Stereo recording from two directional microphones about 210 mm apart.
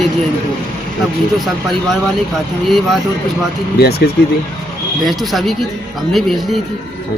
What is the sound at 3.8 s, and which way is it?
Speech, 50° left (ahead or behind).